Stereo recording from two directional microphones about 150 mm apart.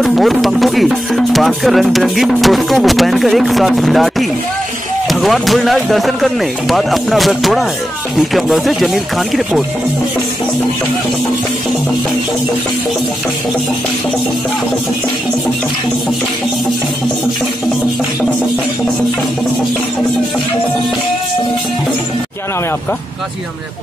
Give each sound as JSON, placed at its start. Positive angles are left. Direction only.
{"t": 0.0, "sound": "speech", "side_deg": 0}